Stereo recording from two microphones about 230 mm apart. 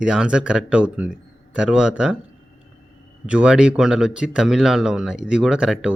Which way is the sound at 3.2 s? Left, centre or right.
Centre.